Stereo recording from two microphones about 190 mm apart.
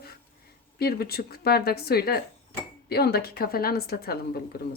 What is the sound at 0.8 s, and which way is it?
A woman's voice, 55° left (ahead or behind).